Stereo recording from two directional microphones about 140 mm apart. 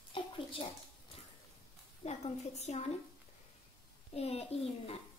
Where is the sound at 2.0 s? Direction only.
50° left (ahead or behind).